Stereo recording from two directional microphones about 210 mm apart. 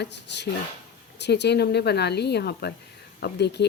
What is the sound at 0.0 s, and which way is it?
Speech, 55° left (ahead or behind).